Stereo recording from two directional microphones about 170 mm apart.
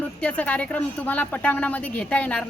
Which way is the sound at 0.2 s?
10° left (ahead or behind).